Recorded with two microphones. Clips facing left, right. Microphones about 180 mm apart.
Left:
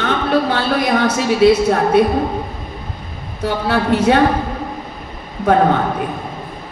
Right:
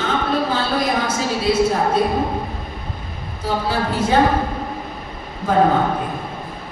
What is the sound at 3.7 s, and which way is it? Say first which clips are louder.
Speech: left 7 dB; 65° left (ahead or behind).